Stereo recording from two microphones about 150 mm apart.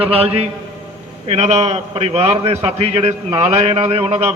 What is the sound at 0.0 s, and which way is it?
A man's voice, 40° right (ahead or behind).